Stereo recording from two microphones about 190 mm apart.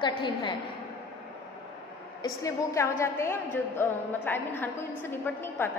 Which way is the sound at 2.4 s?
15° left (ahead or behind).